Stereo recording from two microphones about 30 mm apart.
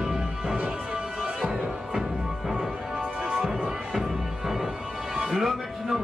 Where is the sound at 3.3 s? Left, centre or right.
Centre.